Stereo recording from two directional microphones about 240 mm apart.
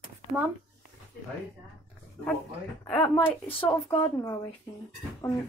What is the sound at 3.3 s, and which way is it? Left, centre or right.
Speech, centre.